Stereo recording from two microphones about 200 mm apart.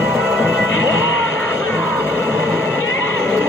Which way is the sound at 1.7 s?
10° left (ahead or behind).